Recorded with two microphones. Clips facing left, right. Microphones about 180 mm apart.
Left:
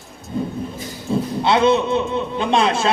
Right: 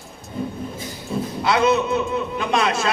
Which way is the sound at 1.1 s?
30° left (ahead or behind).